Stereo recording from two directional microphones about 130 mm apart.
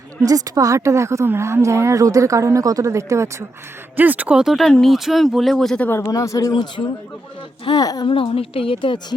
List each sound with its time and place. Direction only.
0.2 s a woman's voice: 25° right (ahead or behind); by 5.9 s 5° left (ahead or behind)
5.9 s speech: 25° left (ahead or behind)
7.6 s speech: 30° left (ahead or behind)